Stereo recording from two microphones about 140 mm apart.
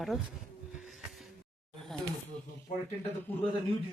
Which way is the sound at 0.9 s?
Centre (ahead or behind).